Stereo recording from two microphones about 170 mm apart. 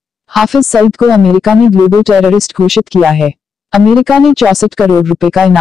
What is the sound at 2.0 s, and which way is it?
Speech, centre (ahead or behind).